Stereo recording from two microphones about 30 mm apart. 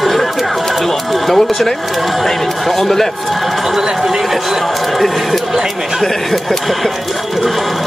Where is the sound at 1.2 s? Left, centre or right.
Centre.